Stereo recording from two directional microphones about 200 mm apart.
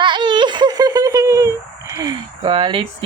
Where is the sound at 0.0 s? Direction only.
25° right (ahead or behind).